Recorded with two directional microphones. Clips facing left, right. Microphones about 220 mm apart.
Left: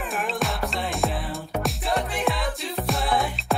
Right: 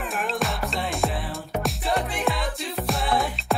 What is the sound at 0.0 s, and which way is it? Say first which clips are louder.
Music: even; centre (ahead or behind).